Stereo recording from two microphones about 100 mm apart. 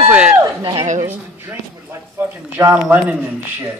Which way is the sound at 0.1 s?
10° right (ahead or behind).